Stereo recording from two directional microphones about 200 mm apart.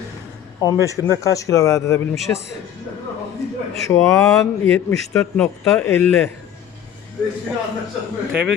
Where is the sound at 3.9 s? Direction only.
15° left (ahead or behind).